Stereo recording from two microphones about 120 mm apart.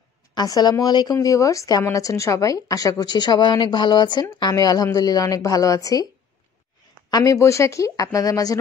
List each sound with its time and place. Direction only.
0.3 s a woman's voice: 35° left (ahead or behind)
7.1 s speech: 30° left (ahead or behind)